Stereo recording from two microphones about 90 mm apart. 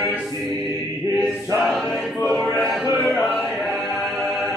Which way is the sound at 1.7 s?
5° left (ahead or behind).